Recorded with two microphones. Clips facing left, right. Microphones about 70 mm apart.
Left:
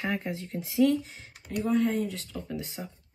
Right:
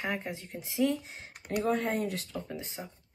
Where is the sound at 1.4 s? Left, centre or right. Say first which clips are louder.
Left 3 dB; right.